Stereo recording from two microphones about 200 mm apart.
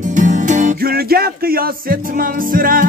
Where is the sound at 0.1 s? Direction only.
40° right (ahead or behind).